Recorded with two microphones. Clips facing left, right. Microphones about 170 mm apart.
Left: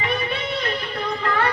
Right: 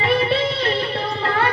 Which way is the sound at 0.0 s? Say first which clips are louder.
Right 7 dB; 30° right (ahead or behind).